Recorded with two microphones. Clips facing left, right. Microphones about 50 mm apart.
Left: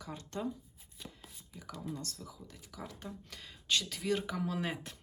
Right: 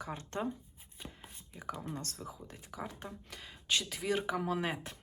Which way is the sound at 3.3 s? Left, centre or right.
Centre.